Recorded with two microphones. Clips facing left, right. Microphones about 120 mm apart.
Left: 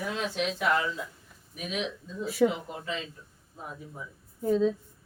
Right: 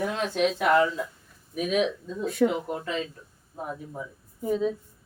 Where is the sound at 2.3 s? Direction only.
5° left (ahead or behind).